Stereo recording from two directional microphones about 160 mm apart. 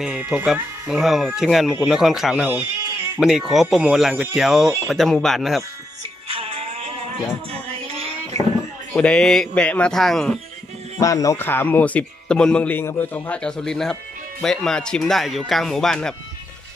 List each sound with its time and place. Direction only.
0.0 s speech: 5° right (ahead or behind)
6.2 s music: 35° right (ahead or behind)
7.5 s a sound: 40° right (ahead or behind)
8.9 s speech: 5° left (ahead or behind)
11.0 s a man's voice: 20° left (ahead or behind); by 16.2 s 5° left (ahead or behind)